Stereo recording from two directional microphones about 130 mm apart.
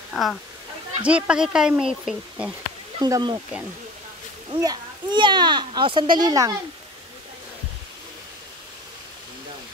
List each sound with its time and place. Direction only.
0.1 s speech: centre (ahead or behind)
3.0 s a child's voice: 35° right (ahead or behind)
4.5 s a child's voice: 35° right (ahead or behind)